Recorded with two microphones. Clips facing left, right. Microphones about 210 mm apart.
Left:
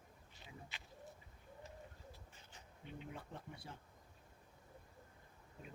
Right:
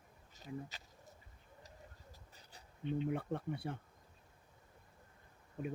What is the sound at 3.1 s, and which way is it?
Speech, 60° right (ahead or behind).